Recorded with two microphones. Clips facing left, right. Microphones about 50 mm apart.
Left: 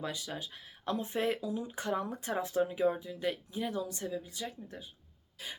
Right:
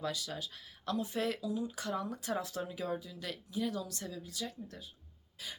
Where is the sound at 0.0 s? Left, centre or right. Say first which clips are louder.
Even; left.